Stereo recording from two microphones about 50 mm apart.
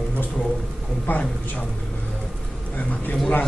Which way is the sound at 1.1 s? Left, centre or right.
Left.